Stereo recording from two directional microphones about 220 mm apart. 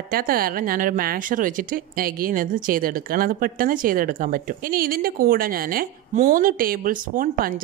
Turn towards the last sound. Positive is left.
turn(degrees=-40)  # may be behind; listen again after turning